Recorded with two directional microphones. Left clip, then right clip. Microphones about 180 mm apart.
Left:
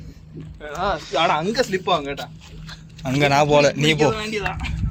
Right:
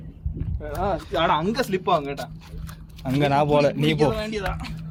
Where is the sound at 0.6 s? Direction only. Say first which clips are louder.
Left 2 dB; 50° right (ahead or behind); by 2.3 s 70° right (ahead or behind).